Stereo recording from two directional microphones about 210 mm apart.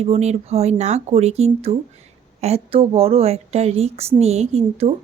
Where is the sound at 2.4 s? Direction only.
30° right (ahead or behind).